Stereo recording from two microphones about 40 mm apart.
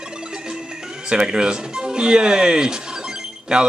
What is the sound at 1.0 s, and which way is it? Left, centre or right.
Speech, right.